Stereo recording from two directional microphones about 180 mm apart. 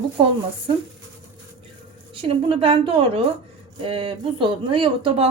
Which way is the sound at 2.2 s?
30° right (ahead or behind).